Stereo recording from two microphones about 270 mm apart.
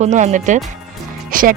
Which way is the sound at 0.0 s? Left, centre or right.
Right.